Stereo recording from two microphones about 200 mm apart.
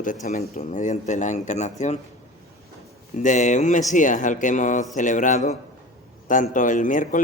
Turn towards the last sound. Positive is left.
turn(degrees=40)  # may be behind; listen again after turning